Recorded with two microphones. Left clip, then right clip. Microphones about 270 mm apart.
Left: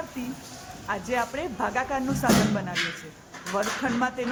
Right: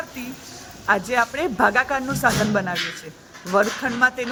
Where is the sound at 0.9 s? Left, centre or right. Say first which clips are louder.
Right 8 dB; right.